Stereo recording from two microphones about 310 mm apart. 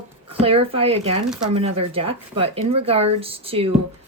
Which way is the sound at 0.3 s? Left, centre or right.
Centre.